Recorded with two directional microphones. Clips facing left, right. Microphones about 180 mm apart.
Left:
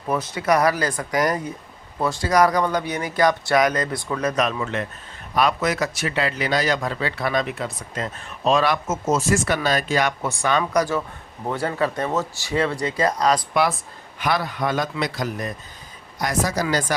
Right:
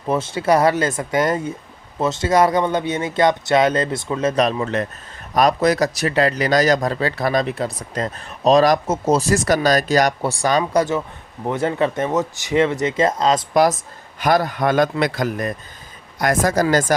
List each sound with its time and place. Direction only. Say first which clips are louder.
0.1 s speech: right 3 dB; 25° right (ahead or behind)
10.6 s speech: right 3 dB; 25° right (ahead or behind)
13.5 s a man's voice: right 5 dB; 40° right (ahead or behind)